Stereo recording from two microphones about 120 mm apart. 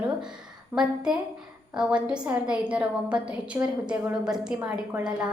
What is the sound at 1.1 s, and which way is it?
A woman's voice, 5° right (ahead or behind).